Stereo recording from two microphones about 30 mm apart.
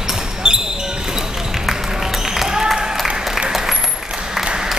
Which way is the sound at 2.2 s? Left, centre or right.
Centre.